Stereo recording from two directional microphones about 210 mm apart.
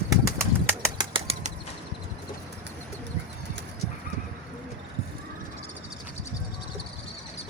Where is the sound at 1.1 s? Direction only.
30° right (ahead or behind).